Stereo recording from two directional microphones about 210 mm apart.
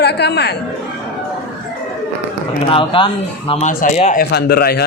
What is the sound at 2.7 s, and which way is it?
Speech, 25° left (ahead or behind).